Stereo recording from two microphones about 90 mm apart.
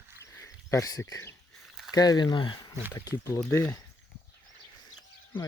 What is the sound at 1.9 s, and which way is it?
Speech, 45° left (ahead or behind).